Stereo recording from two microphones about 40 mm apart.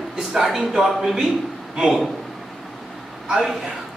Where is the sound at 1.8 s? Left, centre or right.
Right.